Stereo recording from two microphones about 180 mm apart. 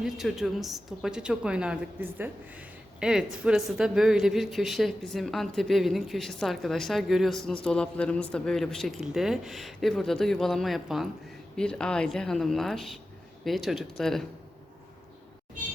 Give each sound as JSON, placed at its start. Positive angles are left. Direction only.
{"t": 0.0, "sound": "speech", "side_deg": 0}